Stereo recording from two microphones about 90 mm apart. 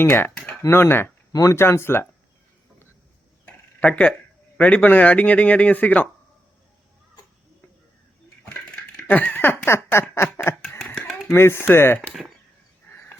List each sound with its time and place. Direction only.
0.0 s speech: 25° left (ahead or behind)
1.3 s speech: 40° left (ahead or behind)
1.5 s speech: 30° left (ahead or behind)
3.4 s a sound: 15° left (ahead or behind)
4.5 s speech: 15° left (ahead or behind)
9.0 s speech: 15° left (ahead or behind)
12.9 s a sound: 25° left (ahead or behind)